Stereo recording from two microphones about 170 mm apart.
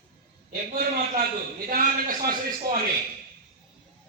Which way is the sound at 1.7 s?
55° right (ahead or behind).